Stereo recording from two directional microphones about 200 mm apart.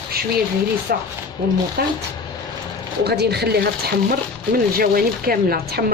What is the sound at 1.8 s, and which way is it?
Speech, 50° right (ahead or behind).